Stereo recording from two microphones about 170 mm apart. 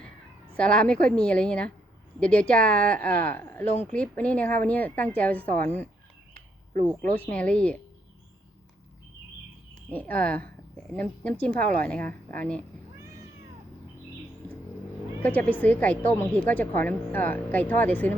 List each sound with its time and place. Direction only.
0.5 s speech: 5° left (ahead or behind)
7.2 s speech: 10° left (ahead or behind)
9.7 s speech: 10° left (ahead or behind)
15.2 s speech: 10° left (ahead or behind)